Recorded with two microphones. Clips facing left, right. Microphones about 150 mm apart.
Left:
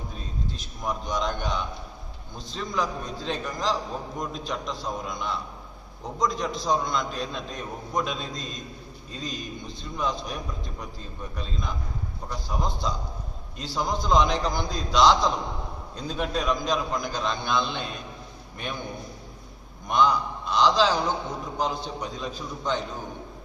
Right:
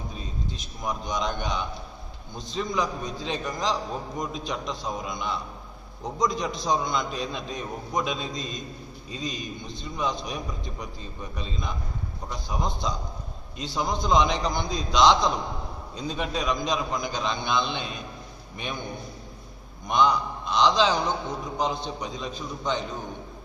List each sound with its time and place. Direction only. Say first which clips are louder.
0.9 s a man's voice: left 1 dB; centre (ahead or behind)
19.9 s a man's voice: even; 5° left (ahead or behind)